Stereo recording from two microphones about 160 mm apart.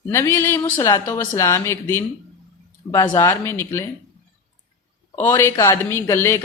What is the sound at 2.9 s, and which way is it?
Speech, 30° left (ahead or behind).